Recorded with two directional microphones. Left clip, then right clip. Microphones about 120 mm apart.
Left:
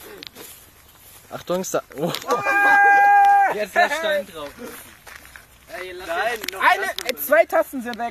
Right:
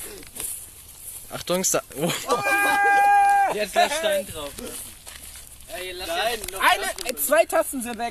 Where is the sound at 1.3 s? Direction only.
Centre (ahead or behind).